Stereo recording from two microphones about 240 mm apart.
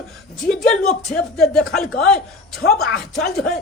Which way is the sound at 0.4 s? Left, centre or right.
Centre.